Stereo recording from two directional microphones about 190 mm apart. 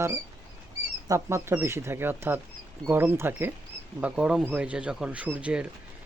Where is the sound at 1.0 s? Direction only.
15° right (ahead or behind).